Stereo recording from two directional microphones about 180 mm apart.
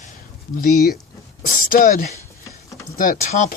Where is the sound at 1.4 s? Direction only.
50° left (ahead or behind).